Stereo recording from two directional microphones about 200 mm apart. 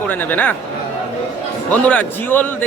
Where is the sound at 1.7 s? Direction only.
5° left (ahead or behind).